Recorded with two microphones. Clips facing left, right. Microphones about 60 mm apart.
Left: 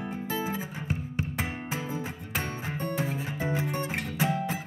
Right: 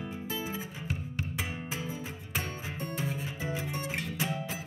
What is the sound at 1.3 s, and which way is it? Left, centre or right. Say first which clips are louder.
Music: left 3 dB; left.